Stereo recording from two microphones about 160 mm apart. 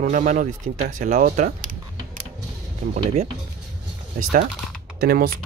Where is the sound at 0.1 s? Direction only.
50° right (ahead or behind).